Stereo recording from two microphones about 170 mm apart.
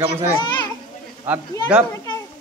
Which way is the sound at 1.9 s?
20° left (ahead or behind).